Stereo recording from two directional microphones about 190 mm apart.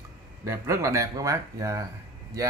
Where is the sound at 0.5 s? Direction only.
15° right (ahead or behind).